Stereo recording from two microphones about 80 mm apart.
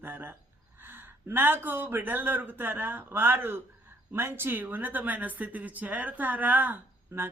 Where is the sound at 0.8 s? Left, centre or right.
Right.